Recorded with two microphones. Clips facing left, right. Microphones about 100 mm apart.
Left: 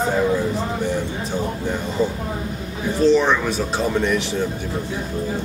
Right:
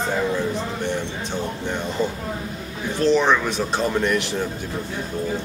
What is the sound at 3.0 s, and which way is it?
Speech, centre (ahead or behind).